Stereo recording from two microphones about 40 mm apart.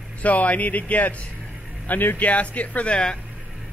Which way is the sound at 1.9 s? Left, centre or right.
Left.